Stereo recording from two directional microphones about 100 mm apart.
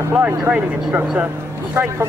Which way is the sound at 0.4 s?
15° right (ahead or behind).